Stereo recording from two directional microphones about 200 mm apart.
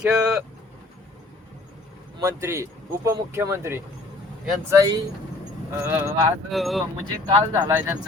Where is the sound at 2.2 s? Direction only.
15° right (ahead or behind).